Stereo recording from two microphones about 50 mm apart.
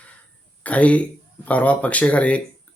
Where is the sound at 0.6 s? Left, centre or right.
Left.